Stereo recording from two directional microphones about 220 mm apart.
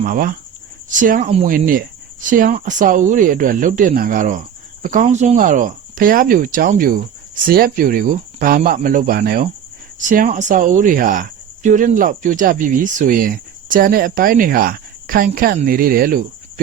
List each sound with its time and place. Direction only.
0.0 s speech: 40° right (ahead or behind)
1.5 s speech: 40° right (ahead or behind)